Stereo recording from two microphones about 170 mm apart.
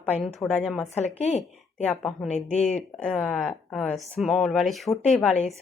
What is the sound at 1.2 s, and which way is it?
Speech, 45° left (ahead or behind).